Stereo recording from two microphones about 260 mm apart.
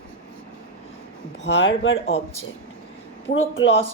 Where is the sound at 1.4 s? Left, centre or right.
Left.